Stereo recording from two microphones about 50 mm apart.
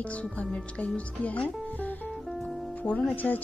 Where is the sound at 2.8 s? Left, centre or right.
Left.